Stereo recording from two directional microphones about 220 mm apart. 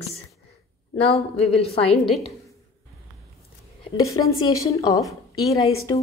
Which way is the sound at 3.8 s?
15° left (ahead or behind).